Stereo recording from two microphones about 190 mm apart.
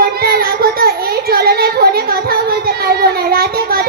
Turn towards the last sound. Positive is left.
turn(degrees=-55)  # may be behind; listen again after turning